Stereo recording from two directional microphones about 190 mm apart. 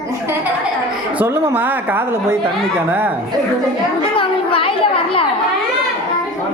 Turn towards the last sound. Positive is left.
turn(degrees=30)  # may be behind; listen again after turning